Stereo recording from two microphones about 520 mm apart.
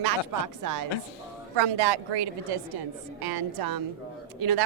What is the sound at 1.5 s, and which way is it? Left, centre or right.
A woman's voice, right.